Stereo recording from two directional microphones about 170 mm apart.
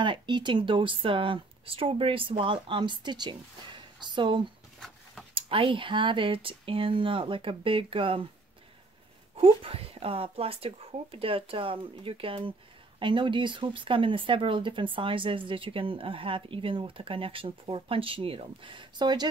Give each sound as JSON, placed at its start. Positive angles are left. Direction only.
{"t": 0.0, "sound": "speech", "side_deg": -25}
{"t": 4.7, "sound": "a sound", "side_deg": 0}
{"t": 5.3, "sound": "speech", "side_deg": -30}
{"t": 9.4, "sound": "speech", "side_deg": -35}